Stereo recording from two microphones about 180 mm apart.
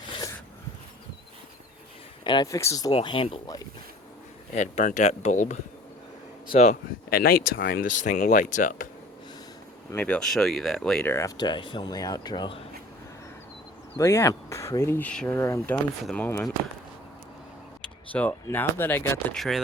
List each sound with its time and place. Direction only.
2.2 s speech: 25° left (ahead or behind)
2.9 s speech: 30° left (ahead or behind)
4.5 s speech: 40° left (ahead or behind)
7.1 s speech: 55° left (ahead or behind)
9.9 s speech: 10° left (ahead or behind)
11.3 s speech: 25° left (ahead or behind)
13.9 s speech: 15° left (ahead or behind)
17.8 s speech: 10° left (ahead or behind)
19.4 s speech: centre (ahead or behind)